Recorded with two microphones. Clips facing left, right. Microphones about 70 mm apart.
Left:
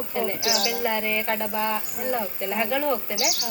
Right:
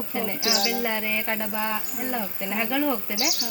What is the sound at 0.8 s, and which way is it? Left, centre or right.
Speech, centre.